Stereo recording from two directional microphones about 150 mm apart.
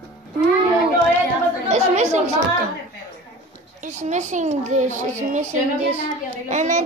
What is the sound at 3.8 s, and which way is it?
Speech, 50° right (ahead or behind).